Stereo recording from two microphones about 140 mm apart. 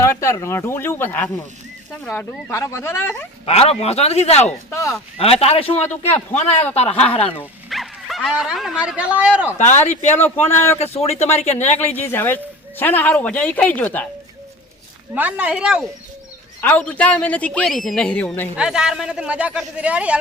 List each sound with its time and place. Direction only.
0.0 s speech: 20° left (ahead or behind)
3.4 s speech: 45° left (ahead or behind)
4.7 s speech: 20° left (ahead or behind)
5.1 s speech: 45° left (ahead or behind)
7.7 s speech: centre (ahead or behind)
9.6 s speech: 55° left (ahead or behind)
10.4 s speech: 15° left (ahead or behind)
10.8 s speech: 45° left (ahead or behind)
11.9 s speech: 15° left (ahead or behind)
15.1 s speech: 10° right (ahead or behind)
16.6 s speech: 10° left (ahead or behind)
18.5 s speech: 5° right (ahead or behind)